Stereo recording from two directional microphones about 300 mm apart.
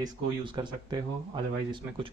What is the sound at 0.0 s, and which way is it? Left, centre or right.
Speech, centre.